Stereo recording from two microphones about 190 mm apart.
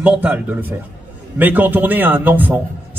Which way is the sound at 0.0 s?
10° right (ahead or behind).